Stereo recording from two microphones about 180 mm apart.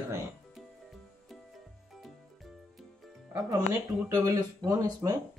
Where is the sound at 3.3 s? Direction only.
20° right (ahead or behind).